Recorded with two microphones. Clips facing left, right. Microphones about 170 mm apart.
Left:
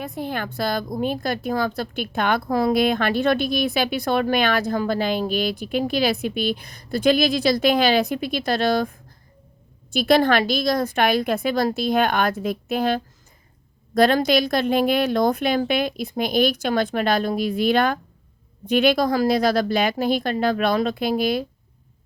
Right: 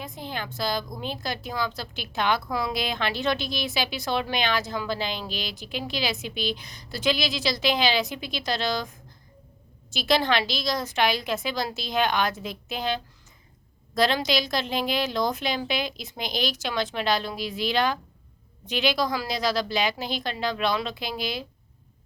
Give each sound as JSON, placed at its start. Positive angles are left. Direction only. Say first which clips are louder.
{"t": 0.0, "sound": "a woman's voice", "louder": "left 7 dB", "side_deg": 60}